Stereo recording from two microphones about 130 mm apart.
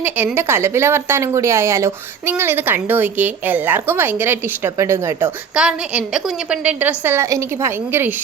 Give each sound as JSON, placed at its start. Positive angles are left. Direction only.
{"t": 0.0, "sound": "speech", "side_deg": -15}
{"t": 5.5, "sound": "speech", "side_deg": -10}